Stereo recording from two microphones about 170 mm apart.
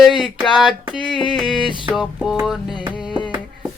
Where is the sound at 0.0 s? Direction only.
Centre (ahead or behind).